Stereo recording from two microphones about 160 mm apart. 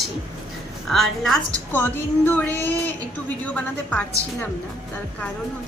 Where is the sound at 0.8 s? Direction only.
Centre (ahead or behind).